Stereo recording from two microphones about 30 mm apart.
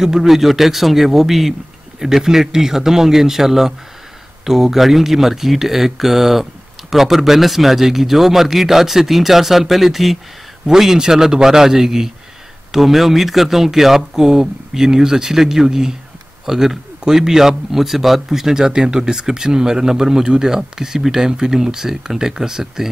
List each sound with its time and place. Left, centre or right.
0.0 s speech: centre
0.3 s a man's voice: centre
10.7 s speech: centre
12.7 s speech: centre
14.1 s speech: centre
17.6 s speech: centre